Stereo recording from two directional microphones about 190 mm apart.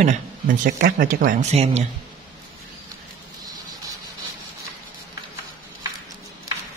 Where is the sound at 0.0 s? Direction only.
40° right (ahead or behind).